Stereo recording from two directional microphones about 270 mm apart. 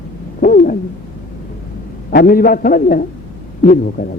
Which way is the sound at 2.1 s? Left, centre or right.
Left.